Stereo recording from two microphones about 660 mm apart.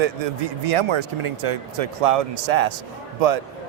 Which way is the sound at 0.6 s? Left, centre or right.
Right.